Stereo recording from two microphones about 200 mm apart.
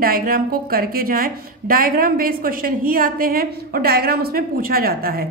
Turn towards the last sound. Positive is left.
turn(degrees=-50)  # may be behind; listen again after turning